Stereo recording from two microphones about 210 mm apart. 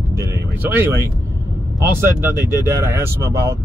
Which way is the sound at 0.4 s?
10° right (ahead or behind).